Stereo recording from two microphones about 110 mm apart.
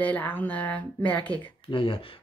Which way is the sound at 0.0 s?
15° left (ahead or behind).